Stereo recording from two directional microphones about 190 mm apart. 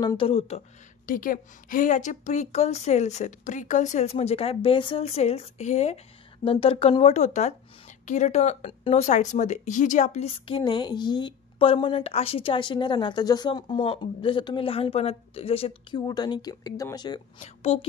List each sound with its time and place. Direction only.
0.0 s speech: 25° left (ahead or behind)
1.0 s a woman's voice: 45° left (ahead or behind); by 17.2 s 20° left (ahead or behind)
17.4 s a woman's voice: 30° left (ahead or behind)